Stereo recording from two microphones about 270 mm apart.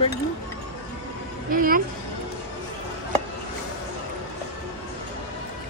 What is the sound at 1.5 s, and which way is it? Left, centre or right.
Speech, right.